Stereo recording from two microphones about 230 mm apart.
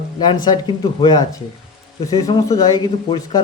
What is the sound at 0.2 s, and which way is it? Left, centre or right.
Speech, centre.